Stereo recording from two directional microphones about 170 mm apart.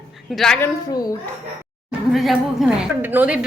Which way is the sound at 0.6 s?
20° left (ahead or behind).